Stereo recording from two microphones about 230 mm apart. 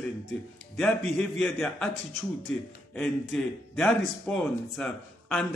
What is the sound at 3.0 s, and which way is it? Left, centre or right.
Speech, centre.